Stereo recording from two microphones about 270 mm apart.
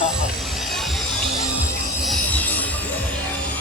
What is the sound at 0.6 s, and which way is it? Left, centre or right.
Music, centre.